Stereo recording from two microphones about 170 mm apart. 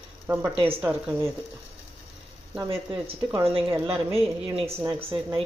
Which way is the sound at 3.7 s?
15° right (ahead or behind).